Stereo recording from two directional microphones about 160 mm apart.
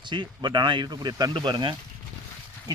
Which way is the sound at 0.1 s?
30° right (ahead or behind).